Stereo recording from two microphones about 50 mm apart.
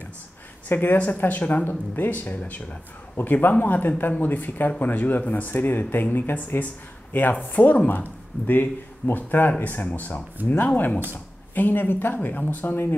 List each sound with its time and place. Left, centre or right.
0.7 s speech: left
10.4 s speech: right
11.5 s speech: left